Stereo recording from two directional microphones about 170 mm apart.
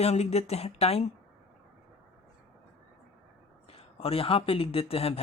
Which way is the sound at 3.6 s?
35° left (ahead or behind).